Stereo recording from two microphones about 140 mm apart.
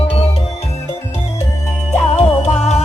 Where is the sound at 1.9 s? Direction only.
55° left (ahead or behind).